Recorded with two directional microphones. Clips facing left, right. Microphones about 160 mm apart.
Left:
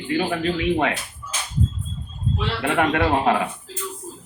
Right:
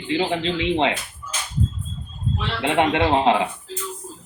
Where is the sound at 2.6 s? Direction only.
20° right (ahead or behind).